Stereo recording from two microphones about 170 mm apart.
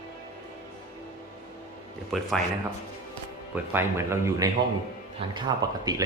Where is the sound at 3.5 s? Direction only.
15° right (ahead or behind).